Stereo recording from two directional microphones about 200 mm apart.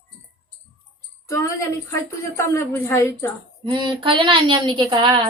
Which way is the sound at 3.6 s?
25° right (ahead or behind).